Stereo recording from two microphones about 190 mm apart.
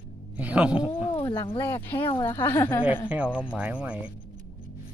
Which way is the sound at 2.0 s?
25° left (ahead or behind).